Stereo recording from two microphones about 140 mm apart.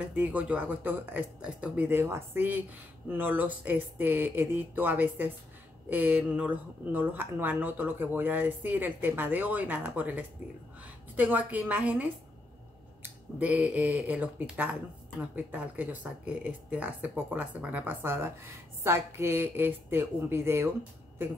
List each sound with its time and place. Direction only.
0.1 s speech: 10° right (ahead or behind)